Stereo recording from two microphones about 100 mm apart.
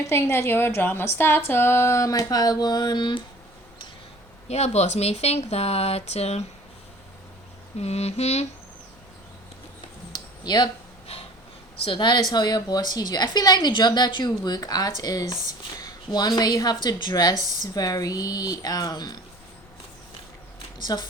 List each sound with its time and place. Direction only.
0.0 s speech: 30° left (ahead or behind); by 3.2 s 50° left (ahead or behind)
4.4 s speech: 90° left
7.8 s speech: 90° left
10.1 s a sound: 45° left (ahead or behind)
11.9 s a woman's voice: 50° left (ahead or behind)
20.8 s a woman's voice: 45° left (ahead or behind)